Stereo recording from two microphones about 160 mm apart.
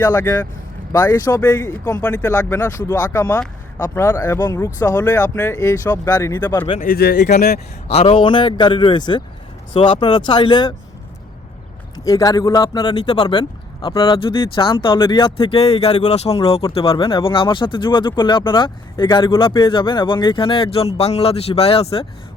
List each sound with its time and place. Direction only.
0.0 s a man's voice: 20° left (ahead or behind)
6.7 s speech: 70° left (ahead or behind)
7.2 s a man's voice: 50° left (ahead or behind); by 10.8 s 30° left (ahead or behind)
11.9 s a man's voice: 25° left (ahead or behind); by 22.0 s 40° left (ahead or behind)